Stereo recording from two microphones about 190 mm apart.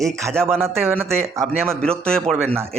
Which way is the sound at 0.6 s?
10° right (ahead or behind).